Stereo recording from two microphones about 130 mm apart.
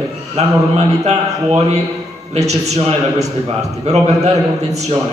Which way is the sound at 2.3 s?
60° right (ahead or behind).